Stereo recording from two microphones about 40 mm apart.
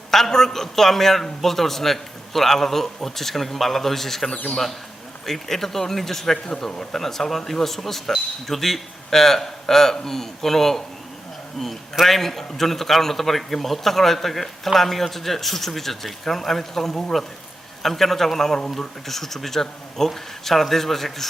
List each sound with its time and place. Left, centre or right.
0.1 s a man's voice: centre